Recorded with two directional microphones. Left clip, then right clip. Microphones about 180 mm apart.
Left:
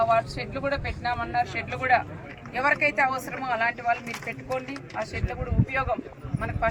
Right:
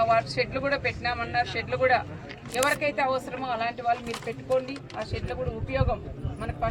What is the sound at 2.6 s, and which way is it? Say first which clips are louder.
Speech: left 2 dB; 30° right (ahead or behind).